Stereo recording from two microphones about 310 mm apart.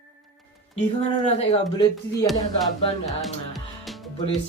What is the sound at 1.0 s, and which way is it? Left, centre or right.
Speech, left.